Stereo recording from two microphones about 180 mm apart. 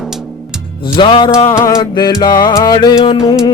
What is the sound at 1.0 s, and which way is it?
Music, 25° left (ahead or behind).